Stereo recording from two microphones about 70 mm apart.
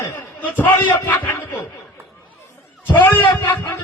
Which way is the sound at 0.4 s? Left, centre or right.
Left.